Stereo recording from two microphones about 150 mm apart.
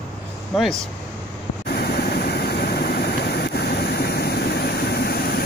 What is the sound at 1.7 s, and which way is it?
Vehicle, 90° left.